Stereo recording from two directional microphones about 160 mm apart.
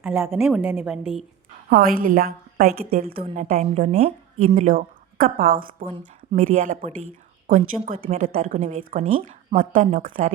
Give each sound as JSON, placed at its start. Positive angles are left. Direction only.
{"t": 0.0, "sound": "a woman's voice", "side_deg": -15}
{"t": 1.7, "sound": "a woman's voice", "side_deg": -65}
{"t": 2.6, "sound": "a woman's voice", "side_deg": -40}
{"t": 3.0, "sound": "a woman's voice", "side_deg": -65}
{"t": 3.3, "sound": "speech", "side_deg": -45}
{"t": 4.5, "sound": "speech", "side_deg": -55}
{"t": 6.5, "sound": "speech", "side_deg": -50}
{"t": 8.0, "sound": "a woman's voice", "side_deg": -40}
{"t": 8.4, "sound": "a woman's voice", "side_deg": -55}
{"t": 9.0, "sound": "speech", "side_deg": -40}
{"t": 9.6, "sound": "speech", "side_deg": -50}